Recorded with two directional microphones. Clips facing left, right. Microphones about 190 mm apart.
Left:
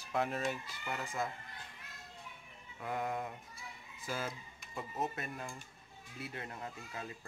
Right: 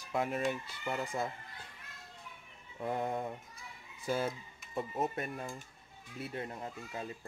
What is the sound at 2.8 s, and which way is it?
Speech, 30° right (ahead or behind).